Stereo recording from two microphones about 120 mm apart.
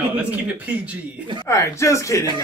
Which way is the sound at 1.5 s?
25° left (ahead or behind).